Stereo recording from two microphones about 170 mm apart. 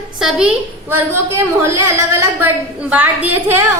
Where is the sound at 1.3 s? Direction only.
15° right (ahead or behind).